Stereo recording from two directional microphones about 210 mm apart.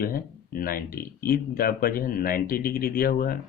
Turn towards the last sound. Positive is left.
turn(degrees=45)  # may be behind; listen again after turning